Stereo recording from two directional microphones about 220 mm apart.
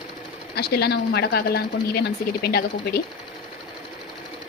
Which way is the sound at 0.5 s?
45° left (ahead or behind).